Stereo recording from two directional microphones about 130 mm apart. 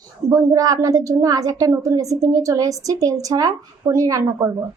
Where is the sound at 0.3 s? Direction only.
25° right (ahead or behind).